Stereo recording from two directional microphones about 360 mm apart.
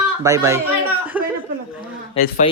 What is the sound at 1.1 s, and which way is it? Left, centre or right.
Chuckle, centre.